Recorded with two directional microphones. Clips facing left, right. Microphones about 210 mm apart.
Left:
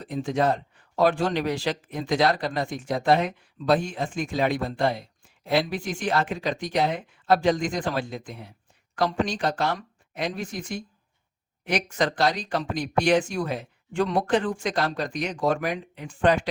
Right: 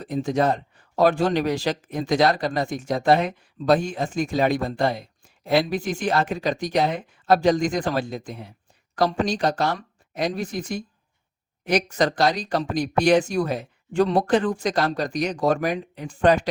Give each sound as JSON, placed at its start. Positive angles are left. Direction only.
{"t": 0.1, "sound": "speech", "side_deg": -40}